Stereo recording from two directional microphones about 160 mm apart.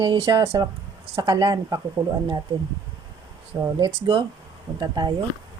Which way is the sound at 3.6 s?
25° right (ahead or behind).